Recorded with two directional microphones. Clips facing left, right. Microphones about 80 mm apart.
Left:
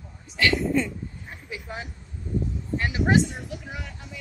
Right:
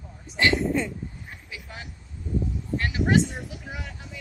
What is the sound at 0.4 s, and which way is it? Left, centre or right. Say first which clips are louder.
Speech: even; right.